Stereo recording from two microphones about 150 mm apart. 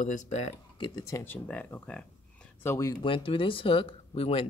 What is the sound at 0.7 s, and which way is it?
Speech, 35° left (ahead or behind).